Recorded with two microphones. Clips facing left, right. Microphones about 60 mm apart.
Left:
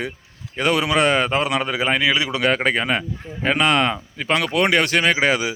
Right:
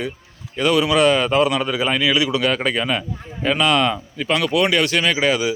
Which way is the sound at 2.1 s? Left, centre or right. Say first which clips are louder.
Right 1 dB; left.